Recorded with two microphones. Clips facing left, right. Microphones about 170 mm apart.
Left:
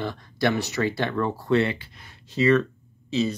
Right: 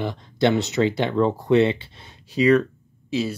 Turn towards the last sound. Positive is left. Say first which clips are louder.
# even
turn(degrees=-10)  # may be behind; listen again after turning